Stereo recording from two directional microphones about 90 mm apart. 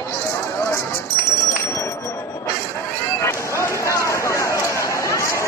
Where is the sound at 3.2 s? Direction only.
30° left (ahead or behind).